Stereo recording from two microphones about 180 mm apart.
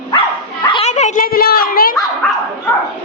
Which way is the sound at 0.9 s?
40° left (ahead or behind).